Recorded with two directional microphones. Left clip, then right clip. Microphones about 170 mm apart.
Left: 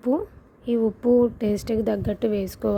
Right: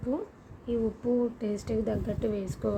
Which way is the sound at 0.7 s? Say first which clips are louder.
Left 9 dB; 45° left (ahead or behind).